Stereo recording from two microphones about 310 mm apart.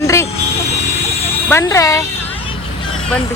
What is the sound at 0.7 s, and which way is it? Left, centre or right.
Vehicle, left.